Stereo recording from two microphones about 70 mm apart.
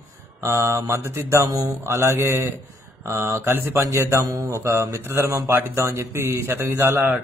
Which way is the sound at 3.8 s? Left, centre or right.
Right.